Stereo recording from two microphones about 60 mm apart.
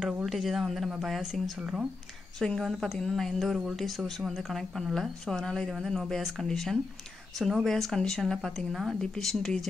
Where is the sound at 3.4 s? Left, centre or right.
Centre.